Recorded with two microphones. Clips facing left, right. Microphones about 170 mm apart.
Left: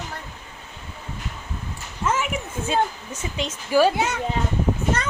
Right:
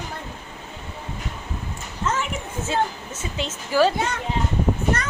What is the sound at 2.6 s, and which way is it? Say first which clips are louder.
A woman's voice: left 1 dB; 15° left (ahead or behind).